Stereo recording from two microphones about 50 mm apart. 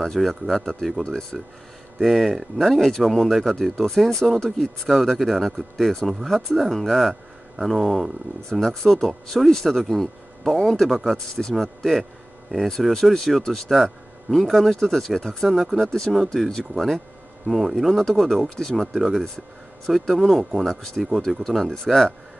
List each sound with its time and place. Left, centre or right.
0.0 s speech: centre
1.0 s speech: centre
2.0 s speech: centre
8.5 s speech: centre
9.8 s speech: centre
12.0 s a sound: centre
12.6 s speech: centre
20.6 s speech: centre